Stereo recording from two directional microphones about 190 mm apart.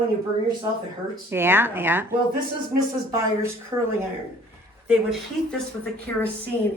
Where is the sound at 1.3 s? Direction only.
10° right (ahead or behind).